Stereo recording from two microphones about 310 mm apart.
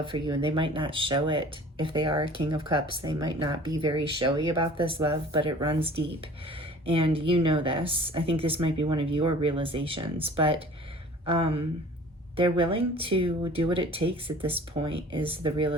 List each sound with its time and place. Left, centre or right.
0.0 s speech: centre